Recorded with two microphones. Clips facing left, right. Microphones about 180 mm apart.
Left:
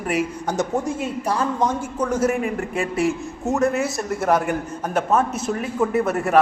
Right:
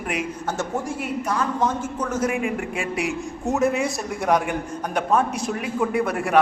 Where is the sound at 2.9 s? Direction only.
Centre (ahead or behind).